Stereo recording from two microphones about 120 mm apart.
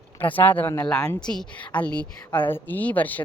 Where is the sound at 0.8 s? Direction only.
5° left (ahead or behind).